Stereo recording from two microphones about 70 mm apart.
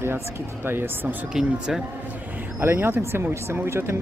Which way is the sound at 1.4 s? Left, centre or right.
Centre.